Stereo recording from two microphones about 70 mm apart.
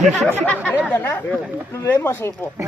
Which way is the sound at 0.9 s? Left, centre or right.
Left.